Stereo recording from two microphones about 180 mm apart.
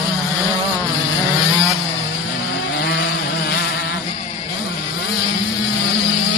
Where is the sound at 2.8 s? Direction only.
65° left (ahead or behind).